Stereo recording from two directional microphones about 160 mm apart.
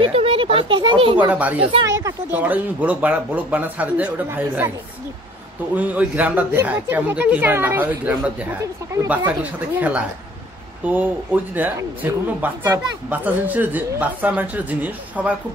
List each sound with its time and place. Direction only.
0.0 s a sound: 40° right (ahead or behind)
1.6 s speech: 35° right (ahead or behind)
2.0 s speech: 15° right (ahead or behind)
5.8 s speech: 10° right (ahead or behind)
8.9 s speech: 15° right (ahead or behind)